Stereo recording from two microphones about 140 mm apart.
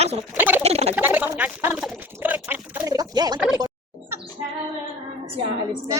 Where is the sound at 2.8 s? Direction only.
25° right (ahead or behind).